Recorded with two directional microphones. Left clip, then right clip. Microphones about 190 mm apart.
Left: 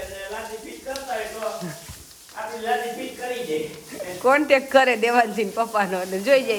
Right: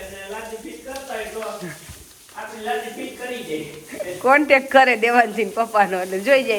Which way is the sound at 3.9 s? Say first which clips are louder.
Right 3 dB; 10° left (ahead or behind).